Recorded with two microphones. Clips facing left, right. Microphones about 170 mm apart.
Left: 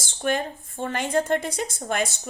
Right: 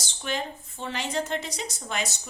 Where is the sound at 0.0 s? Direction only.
50° left (ahead or behind).